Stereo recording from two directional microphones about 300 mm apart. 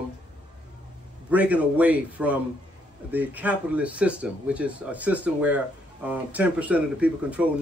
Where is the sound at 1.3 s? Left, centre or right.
Centre.